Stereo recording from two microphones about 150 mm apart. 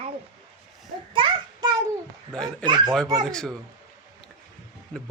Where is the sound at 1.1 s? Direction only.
30° right (ahead or behind).